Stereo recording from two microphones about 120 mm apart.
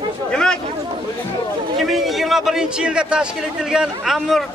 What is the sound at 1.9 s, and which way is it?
A man's voice, centre (ahead or behind).